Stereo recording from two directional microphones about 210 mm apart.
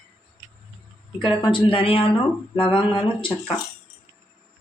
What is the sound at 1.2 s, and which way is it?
Speech, 20° left (ahead or behind).